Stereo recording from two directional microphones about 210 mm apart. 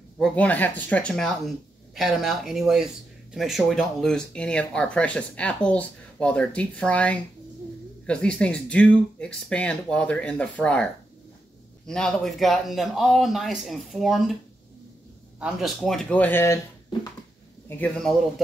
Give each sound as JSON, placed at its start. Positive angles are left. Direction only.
{"t": 0.2, "sound": "speech", "side_deg": 5}
{"t": 15.4, "sound": "speech", "side_deg": 0}
{"t": 17.6, "sound": "speech", "side_deg": 5}